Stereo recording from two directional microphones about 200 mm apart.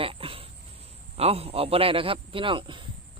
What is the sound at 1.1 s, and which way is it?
Speech, 30° right (ahead or behind).